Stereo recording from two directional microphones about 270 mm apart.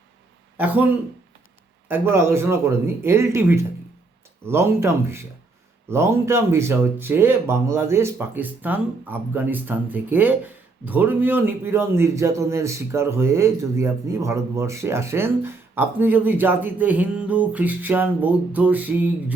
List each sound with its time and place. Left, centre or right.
0.5 s a man's voice: centre